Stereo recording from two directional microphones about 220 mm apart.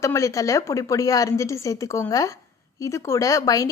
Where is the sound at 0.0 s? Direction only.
15° left (ahead or behind).